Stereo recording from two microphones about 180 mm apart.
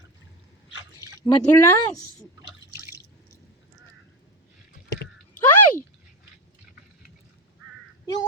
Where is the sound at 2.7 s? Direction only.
15° right (ahead or behind).